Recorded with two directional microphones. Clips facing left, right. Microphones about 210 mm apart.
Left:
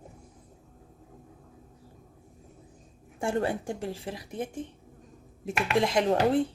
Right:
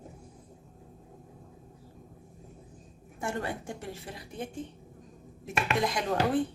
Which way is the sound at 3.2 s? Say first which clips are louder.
Left 6 dB; 30° left (ahead or behind).